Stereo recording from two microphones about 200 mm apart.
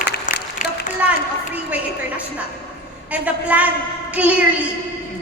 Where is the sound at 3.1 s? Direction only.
5° right (ahead or behind).